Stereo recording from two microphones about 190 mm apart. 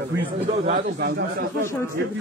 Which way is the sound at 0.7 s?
60° right (ahead or behind).